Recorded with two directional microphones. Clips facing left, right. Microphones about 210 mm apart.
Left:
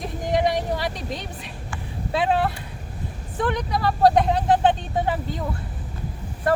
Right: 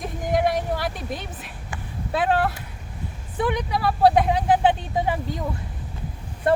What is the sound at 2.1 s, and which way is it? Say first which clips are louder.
Speech: even; 5° right (ahead or behind).